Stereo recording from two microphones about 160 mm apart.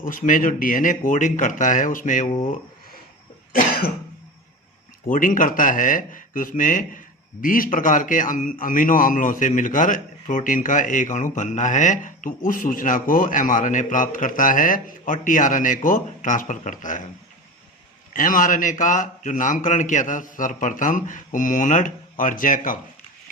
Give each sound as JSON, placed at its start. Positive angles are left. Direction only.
{"t": 0.0, "sound": "a man's voice", "side_deg": 55}
{"t": 3.5, "sound": "cough", "side_deg": 70}
{"t": 5.0, "sound": "a man's voice", "side_deg": 55}
{"t": 18.1, "sound": "a man's voice", "side_deg": 55}